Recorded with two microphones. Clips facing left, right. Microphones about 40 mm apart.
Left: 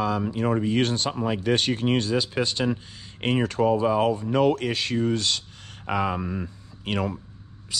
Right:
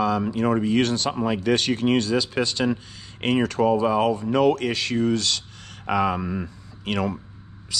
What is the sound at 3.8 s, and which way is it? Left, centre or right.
Speech, right.